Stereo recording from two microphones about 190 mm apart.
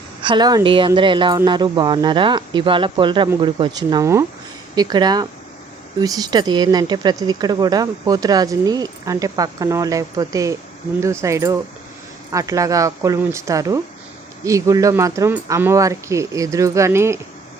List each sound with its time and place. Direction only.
0.2 s speech: 25° right (ahead or behind)